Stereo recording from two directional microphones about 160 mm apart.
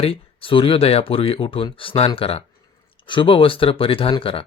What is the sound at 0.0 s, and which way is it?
Speech, 35° left (ahead or behind).